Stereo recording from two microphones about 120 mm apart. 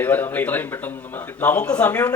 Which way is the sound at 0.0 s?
15° left (ahead or behind).